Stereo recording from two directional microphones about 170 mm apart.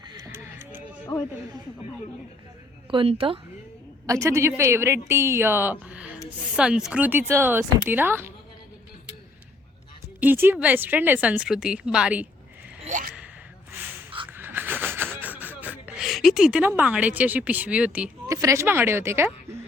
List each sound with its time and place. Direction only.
0.2 s a sound: 15° right (ahead or behind)
2.9 s a woman's voice: 35° right (ahead or behind)
4.0 s a woman's voice: 20° right (ahead or behind)
10.2 s a woman's voice: 10° right (ahead or behind)
12.8 s gasp: 50° right (ahead or behind)
14.3 s a sound: 10° right (ahead or behind)
18.3 s a woman's voice: 20° right (ahead or behind)